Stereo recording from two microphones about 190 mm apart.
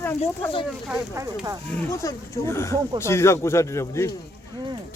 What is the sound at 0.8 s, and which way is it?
Speech, 15° right (ahead or behind).